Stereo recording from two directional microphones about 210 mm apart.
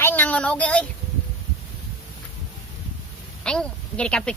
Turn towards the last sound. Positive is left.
turn(degrees=5)  # may be behind; listen again after turning